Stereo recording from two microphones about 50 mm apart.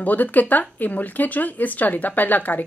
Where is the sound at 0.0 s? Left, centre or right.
Left.